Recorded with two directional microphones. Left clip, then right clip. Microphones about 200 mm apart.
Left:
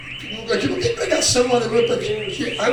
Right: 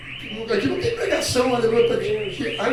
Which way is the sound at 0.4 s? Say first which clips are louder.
Left 2 dB; 30° left (ahead or behind).